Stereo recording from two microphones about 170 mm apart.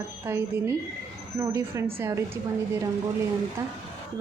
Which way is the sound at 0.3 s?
15° right (ahead or behind).